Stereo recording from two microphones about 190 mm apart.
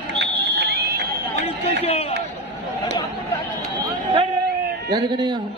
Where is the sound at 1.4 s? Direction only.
35° left (ahead or behind).